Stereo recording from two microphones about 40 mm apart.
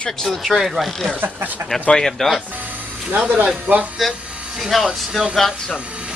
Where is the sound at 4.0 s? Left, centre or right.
Centre.